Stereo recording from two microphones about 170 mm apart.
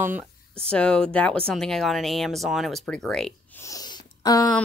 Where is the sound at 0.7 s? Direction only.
5° left (ahead or behind).